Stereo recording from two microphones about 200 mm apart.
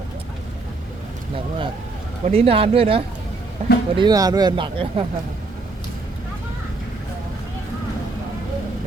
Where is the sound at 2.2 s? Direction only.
30° right (ahead or behind).